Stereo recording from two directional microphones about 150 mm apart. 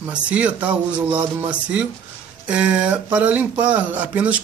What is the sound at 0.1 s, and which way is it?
Speech, 10° right (ahead or behind).